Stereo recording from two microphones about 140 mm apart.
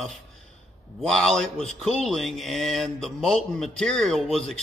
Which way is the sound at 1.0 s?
Centre (ahead or behind).